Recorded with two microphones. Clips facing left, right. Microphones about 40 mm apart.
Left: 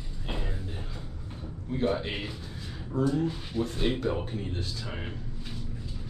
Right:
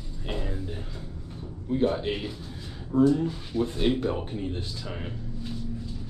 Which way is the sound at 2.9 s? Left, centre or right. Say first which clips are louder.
Right 7 dB; right.